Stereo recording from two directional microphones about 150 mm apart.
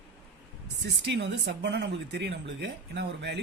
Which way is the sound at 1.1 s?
90° right.